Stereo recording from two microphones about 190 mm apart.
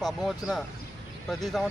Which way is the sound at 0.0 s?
Centre (ahead or behind).